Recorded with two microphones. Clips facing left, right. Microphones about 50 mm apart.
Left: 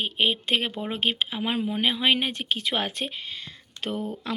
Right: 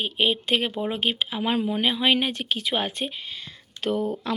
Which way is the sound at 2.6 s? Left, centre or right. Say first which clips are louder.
Right 2 dB; left.